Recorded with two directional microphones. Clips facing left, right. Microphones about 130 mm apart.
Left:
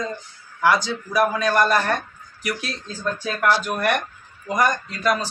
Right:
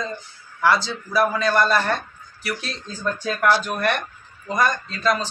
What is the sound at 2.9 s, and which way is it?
Speech, 15° right (ahead or behind).